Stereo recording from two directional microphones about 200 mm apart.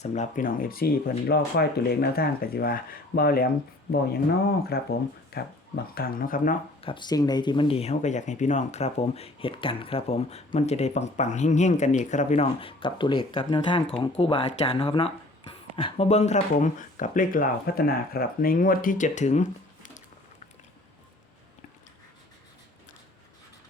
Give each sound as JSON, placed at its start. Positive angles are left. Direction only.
{"t": 0.0, "sound": "speech", "side_deg": 35}
{"t": 4.7, "sound": "speech", "side_deg": 50}
{"t": 6.8, "sound": "speech", "side_deg": 25}